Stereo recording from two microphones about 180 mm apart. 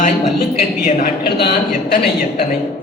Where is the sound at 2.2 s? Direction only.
50° left (ahead or behind).